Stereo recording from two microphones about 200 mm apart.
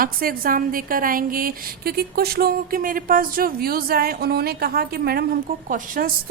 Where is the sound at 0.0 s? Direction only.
45° right (ahead or behind).